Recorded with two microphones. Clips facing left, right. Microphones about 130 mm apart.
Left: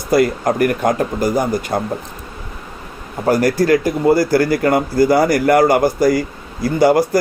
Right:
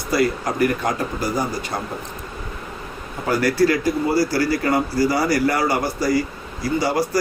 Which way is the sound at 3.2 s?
45° left (ahead or behind).